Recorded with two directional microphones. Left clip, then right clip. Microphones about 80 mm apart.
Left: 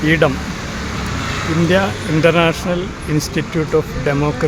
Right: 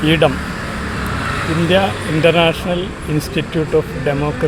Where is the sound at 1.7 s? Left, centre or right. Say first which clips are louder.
Right 2 dB; left.